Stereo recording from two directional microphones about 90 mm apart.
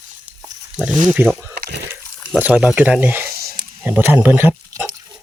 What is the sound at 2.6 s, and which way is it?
Speech, 10° right (ahead or behind).